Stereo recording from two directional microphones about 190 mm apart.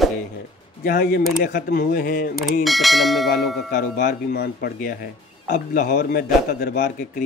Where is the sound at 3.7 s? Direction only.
50° left (ahead or behind).